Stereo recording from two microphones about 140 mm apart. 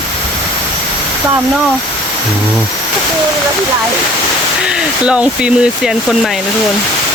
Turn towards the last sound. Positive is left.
turn(degrees=-5)  # may be behind; listen again after turning